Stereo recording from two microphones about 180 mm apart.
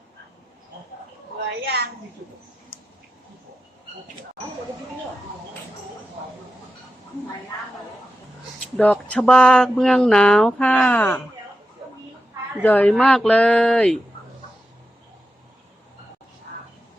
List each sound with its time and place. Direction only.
1.5 s a sound: 65° right (ahead or behind)
8.8 s speech: 10° left (ahead or behind)
12.6 s speech: 10° left (ahead or behind)